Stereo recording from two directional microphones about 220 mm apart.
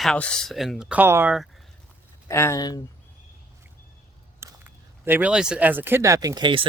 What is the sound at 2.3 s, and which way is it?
Speech, 10° left (ahead or behind).